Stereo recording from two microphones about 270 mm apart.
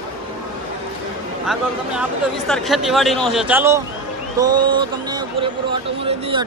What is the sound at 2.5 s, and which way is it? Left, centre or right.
Speech, centre.